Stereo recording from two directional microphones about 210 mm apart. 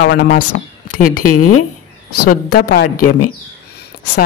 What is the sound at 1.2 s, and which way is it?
Speech, 90° left.